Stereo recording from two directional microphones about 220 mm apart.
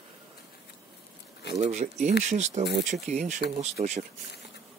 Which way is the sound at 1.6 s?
30° right (ahead or behind).